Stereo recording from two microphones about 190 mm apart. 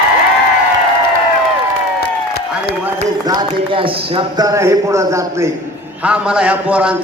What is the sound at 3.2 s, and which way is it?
A man's voice, 20° right (ahead or behind).